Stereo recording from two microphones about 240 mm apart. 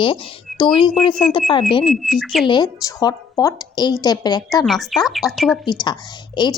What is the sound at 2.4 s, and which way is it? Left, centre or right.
A woman's voice, centre.